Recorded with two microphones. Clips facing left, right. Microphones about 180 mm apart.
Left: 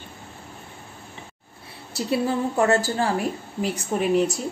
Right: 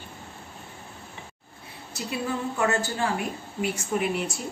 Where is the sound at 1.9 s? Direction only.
35° left (ahead or behind).